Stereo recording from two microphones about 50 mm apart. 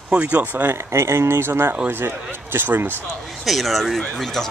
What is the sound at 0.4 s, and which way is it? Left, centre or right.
Speech, right.